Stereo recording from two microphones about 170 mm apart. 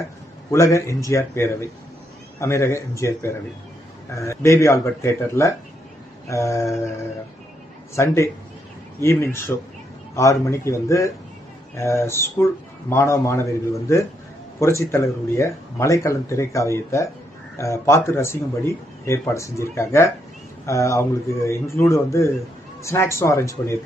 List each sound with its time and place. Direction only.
0.5 s speech: 15° left (ahead or behind)
7.9 s speech: 15° left (ahead or behind)